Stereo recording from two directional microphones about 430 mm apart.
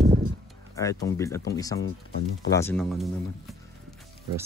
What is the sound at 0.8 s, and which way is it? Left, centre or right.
Speech, centre.